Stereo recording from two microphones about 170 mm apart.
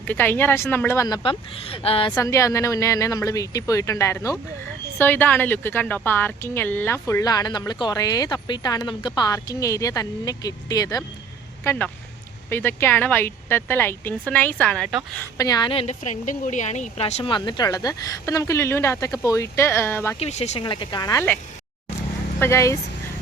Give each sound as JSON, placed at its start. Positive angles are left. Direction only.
{"t": 0.0, "sound": "a woman's voice", "side_deg": 10}
{"t": 1.0, "sound": "a woman's voice", "side_deg": 25}
{"t": 2.1, "sound": "a woman's voice", "side_deg": 15}
{"t": 15.4, "sound": "a woman's voice", "side_deg": 25}
{"t": 17.3, "sound": "a woman's voice", "side_deg": 25}
{"t": 20.1, "sound": "a woman's voice", "side_deg": 40}
{"t": 22.4, "sound": "a woman's voice", "side_deg": 15}